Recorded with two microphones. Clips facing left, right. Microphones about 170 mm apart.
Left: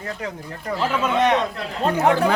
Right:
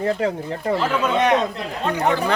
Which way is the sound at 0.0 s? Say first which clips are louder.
Right 10 dB; 30° right (ahead or behind).